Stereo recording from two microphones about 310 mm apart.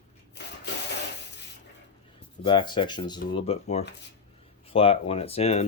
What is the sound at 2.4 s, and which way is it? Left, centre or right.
Speech, centre.